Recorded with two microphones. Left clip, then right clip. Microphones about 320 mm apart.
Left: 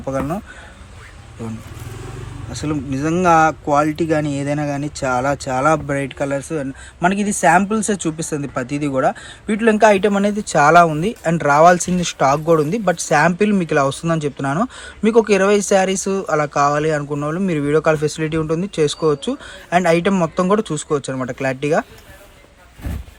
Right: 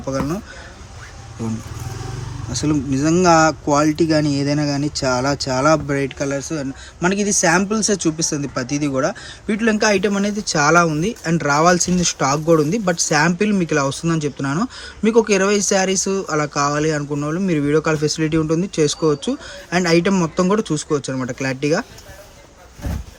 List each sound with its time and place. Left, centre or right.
0.0 s speech: centre
2.5 s speech: centre